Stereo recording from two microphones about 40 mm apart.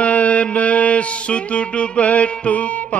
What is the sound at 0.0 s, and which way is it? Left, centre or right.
Music, left.